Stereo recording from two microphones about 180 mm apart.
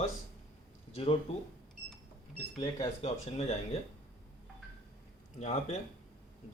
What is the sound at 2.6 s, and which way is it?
Speech, 20° left (ahead or behind).